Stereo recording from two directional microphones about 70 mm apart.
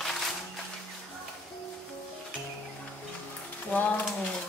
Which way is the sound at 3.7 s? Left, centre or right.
Left.